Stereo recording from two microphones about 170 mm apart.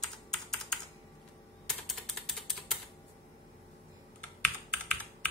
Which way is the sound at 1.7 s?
Centre (ahead or behind).